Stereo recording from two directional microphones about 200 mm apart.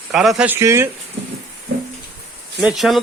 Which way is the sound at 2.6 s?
Centre (ahead or behind).